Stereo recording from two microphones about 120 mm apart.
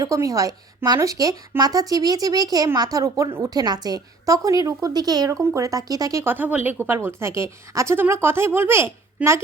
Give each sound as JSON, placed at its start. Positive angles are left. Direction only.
{"t": 0.0, "sound": "a woman's voice", "side_deg": -30}